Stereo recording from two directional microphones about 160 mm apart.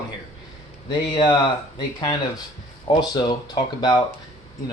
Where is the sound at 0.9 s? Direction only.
30° left (ahead or behind).